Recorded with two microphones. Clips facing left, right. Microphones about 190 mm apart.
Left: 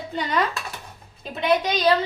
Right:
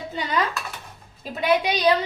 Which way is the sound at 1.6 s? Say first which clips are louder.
Even; 10° right (ahead or behind).